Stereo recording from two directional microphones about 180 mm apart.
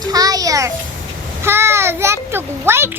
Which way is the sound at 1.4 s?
15° right (ahead or behind).